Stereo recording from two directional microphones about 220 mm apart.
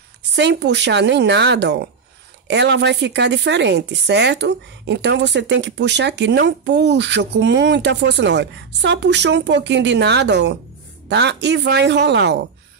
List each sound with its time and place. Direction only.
0.4 s speech: 50° right (ahead or behind)